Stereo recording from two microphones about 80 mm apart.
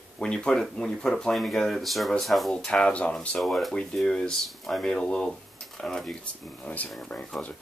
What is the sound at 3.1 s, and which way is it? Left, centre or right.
Speech, centre.